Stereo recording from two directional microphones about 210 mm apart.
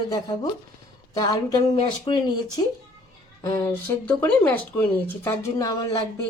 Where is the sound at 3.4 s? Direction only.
15° left (ahead or behind).